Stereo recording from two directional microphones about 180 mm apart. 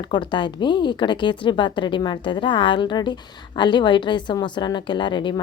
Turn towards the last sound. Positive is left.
turn(degrees=25)  # may be behind; listen again after turning